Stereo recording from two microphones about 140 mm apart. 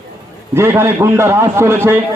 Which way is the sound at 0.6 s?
20° right (ahead or behind).